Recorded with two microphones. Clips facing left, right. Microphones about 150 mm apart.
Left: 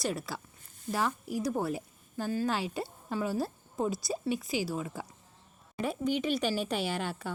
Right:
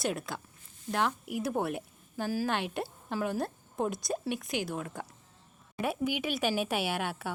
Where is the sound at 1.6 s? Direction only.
Centre (ahead or behind).